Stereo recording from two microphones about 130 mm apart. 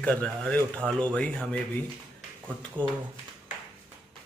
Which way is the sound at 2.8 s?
10° left (ahead or behind).